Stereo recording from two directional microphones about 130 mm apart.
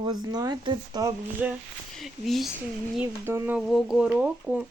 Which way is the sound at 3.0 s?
15° right (ahead or behind).